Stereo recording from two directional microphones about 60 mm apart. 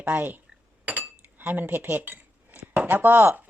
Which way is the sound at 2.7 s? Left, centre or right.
Right.